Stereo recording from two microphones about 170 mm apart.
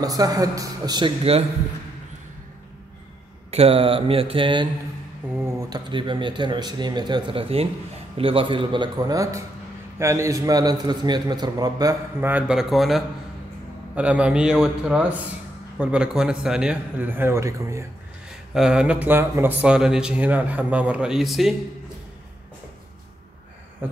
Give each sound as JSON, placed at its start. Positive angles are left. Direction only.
{"t": 0.0, "sound": "a man's voice", "side_deg": -20}
{"t": 3.4, "sound": "mantra", "side_deg": -35}
{"t": 5.3, "sound": "a man's voice", "side_deg": -15}
{"t": 12.3, "sound": "a man's voice", "side_deg": -5}
{"t": 18.5, "sound": "speech", "side_deg": -5}
{"t": 23.8, "sound": "speech", "side_deg": -10}